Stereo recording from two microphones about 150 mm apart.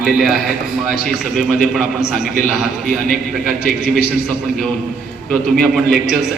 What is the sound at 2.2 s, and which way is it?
Speech, 70° left (ahead or behind).